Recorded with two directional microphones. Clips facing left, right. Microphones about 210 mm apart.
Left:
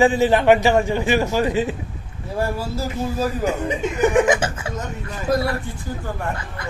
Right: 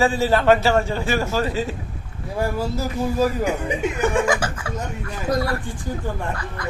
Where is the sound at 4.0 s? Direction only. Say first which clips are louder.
Left 5 dB; 20° left (ahead or behind).